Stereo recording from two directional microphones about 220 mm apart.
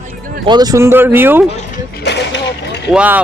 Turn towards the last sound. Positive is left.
turn(degrees=-5)  # may be behind; listen again after turning